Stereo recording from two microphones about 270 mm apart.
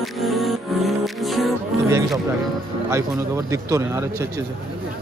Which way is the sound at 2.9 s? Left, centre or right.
Centre.